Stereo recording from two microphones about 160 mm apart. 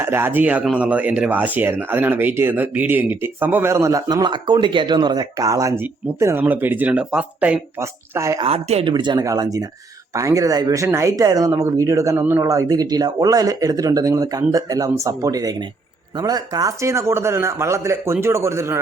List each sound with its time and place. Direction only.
0.0 s speech: 15° right (ahead or behind)
8.4 s speech: 35° right (ahead or behind); by 18.8 s 15° right (ahead or behind)